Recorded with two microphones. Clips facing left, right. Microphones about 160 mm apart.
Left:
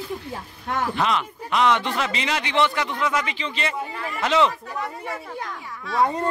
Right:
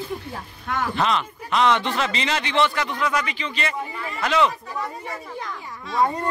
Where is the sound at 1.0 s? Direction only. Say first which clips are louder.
Right 1 dB; 10° left (ahead or behind).